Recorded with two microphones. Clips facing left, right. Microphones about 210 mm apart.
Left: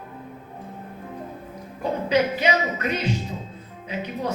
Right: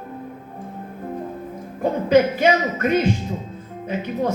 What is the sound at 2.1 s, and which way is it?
Speech, 50° right (ahead or behind).